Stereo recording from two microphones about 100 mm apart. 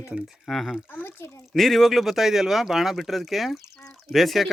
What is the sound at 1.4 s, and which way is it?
Speech, centre (ahead or behind).